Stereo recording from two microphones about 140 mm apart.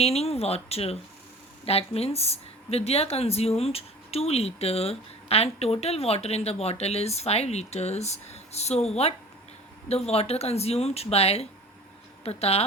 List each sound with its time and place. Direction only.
0.0 s speech: 45° left (ahead or behind)